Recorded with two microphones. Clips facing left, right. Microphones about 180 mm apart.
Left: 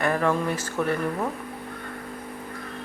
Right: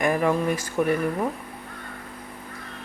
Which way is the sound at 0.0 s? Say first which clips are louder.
Right 2 dB; 15° right (ahead or behind).